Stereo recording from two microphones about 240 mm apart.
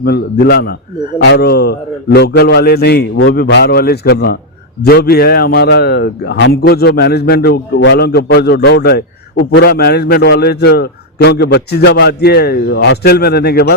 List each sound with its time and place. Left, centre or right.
0.0 s a man's voice: left